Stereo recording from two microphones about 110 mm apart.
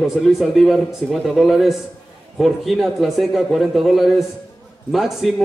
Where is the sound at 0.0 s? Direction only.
Centre (ahead or behind).